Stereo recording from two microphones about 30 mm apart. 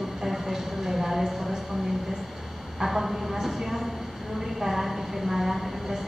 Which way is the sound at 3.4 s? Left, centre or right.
Centre.